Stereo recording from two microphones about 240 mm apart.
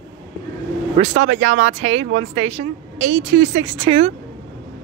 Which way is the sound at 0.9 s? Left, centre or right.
Right.